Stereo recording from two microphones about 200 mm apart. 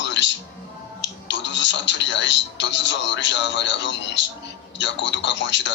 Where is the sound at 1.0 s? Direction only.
65° left (ahead or behind).